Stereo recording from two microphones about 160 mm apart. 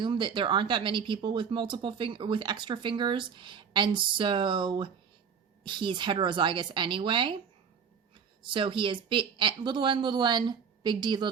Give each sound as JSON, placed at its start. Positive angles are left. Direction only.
{"t": 0.0, "sound": "speech", "side_deg": -30}
{"t": 8.4, "sound": "speech", "side_deg": -30}